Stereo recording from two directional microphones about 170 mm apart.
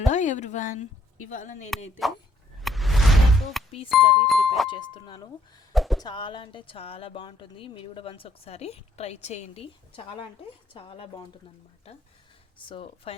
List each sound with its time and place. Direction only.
0.0 s a woman's voice: 45° left (ahead or behind)
2.0 s speech: centre (ahead or behind)
2.6 s a sound: centre (ahead or behind)
3.8 s speech: centre (ahead or behind)
4.7 s speech: 25° left (ahead or behind)
5.7 s a sound: centre (ahead or behind)
6.0 s speech: 25° left (ahead or behind)
12.6 s speech: 30° left (ahead or behind)